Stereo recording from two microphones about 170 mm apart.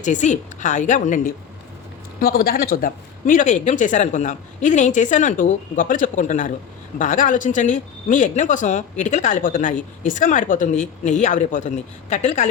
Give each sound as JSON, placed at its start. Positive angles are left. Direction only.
{"t": 0.0, "sound": "speech", "side_deg": 45}
{"t": 2.2, "sound": "speech", "side_deg": 60}